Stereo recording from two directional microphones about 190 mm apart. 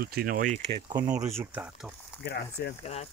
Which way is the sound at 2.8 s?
35° left (ahead or behind).